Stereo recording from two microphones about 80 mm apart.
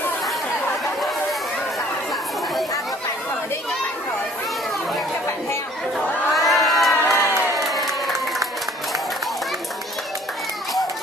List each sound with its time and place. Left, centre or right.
6.3 s crowd: centre
7.5 s applause: centre